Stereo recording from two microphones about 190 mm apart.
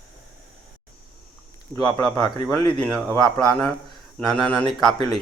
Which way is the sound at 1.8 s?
5° left (ahead or behind).